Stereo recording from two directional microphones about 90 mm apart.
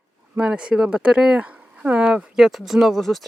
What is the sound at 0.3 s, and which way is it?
Speech, 10° right (ahead or behind).